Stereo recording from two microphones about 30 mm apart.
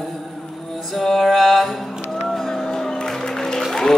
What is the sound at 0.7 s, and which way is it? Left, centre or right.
Music, centre.